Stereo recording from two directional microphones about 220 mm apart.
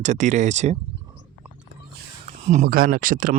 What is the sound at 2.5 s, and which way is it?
Speech, 40° right (ahead or behind).